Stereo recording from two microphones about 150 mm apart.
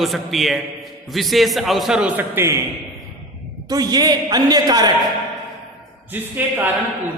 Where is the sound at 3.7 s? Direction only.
25° right (ahead or behind).